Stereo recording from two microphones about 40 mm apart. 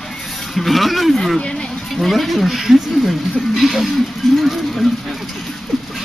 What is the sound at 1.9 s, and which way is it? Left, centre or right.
Speech, centre.